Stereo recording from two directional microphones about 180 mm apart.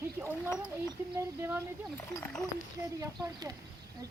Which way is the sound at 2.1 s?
10° left (ahead or behind).